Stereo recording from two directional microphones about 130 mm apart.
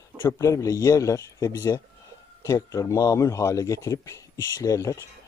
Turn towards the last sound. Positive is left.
turn(degrees=25)  # may be behind; listen again after turning